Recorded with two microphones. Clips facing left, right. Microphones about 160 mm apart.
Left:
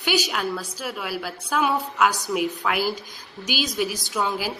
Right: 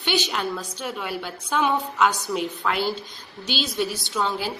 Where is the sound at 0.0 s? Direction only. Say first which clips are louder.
Left 1 dB; 5° left (ahead or behind).